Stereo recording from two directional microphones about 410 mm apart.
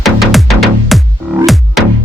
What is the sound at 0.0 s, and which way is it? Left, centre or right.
Music, centre.